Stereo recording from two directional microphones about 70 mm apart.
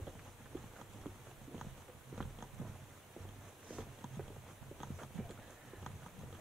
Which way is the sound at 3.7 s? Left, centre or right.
Centre.